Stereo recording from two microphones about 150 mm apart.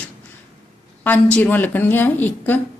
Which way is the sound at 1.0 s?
10° left (ahead or behind).